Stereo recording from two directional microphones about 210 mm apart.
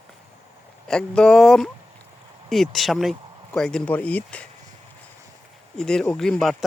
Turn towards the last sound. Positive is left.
turn(degrees=0)  # may be behind; listen again after turning